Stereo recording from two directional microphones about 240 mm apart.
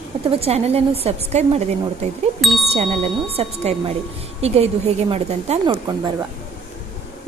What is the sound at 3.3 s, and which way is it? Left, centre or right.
A woman's voice, right.